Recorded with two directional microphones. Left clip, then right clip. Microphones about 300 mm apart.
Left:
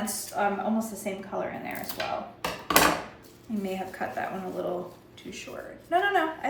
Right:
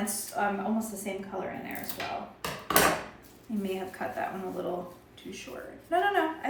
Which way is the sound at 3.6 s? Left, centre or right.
Centre.